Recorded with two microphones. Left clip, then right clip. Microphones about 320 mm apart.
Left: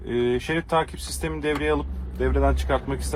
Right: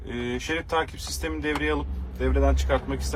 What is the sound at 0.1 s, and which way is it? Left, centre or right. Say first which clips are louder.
A man's voice: left 5 dB; left.